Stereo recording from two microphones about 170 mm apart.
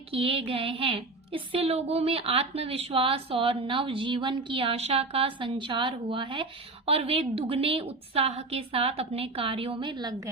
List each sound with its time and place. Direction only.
0.1 s a woman's voice: 35° right (ahead or behind)